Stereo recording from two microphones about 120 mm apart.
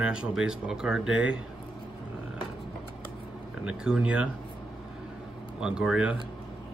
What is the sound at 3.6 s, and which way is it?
Speech, 5° right (ahead or behind).